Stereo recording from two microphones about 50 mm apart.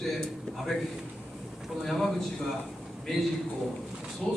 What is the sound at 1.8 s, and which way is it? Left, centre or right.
Speech, centre.